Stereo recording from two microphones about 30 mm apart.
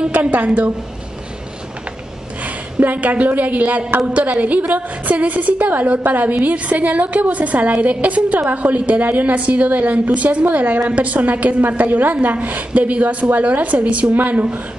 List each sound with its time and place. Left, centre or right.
0.1 s a woman's voice: right
2.4 s a woman's voice: right
6.4 s a woman's voice: right
9.0 s a woman's voice: right
9.4 s a woman's voice: right
11.8 s a woman's voice: right